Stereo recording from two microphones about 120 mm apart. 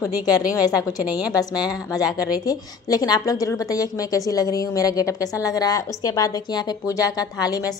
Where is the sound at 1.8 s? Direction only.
30° left (ahead or behind).